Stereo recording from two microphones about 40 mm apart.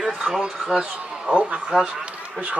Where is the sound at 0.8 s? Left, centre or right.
Right.